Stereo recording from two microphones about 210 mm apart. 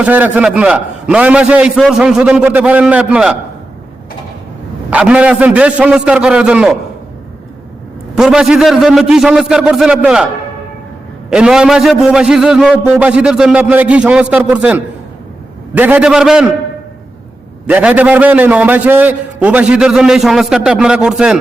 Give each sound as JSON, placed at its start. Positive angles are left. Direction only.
{"t": 0.0, "sound": "a man's voice", "side_deg": -5}
{"t": 4.9, "sound": "a man's voice", "side_deg": -5}
{"t": 8.1, "sound": "a man's voice", "side_deg": -5}
{"t": 11.3, "sound": "a man's voice", "side_deg": -5}
{"t": 17.7, "sound": "a man's voice", "side_deg": -5}